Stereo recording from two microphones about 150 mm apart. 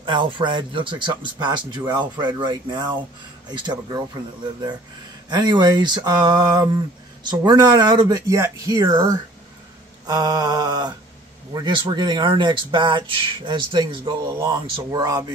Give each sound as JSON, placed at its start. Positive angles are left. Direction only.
{"t": 0.0, "sound": "speech", "side_deg": -30}